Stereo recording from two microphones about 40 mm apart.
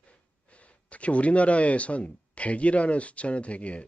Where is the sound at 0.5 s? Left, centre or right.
Left.